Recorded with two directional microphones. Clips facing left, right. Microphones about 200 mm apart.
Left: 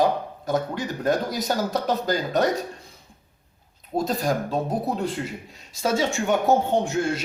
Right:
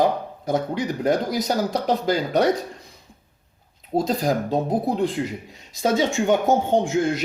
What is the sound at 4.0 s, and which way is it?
A man's voice, 20° right (ahead or behind).